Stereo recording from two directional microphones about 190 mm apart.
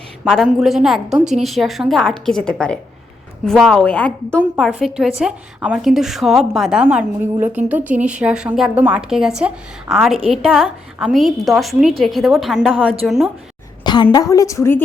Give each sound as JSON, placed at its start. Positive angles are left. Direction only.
{"t": 0.3, "sound": "a woman's voice", "side_deg": 0}
{"t": 13.8, "sound": "a woman's voice", "side_deg": 25}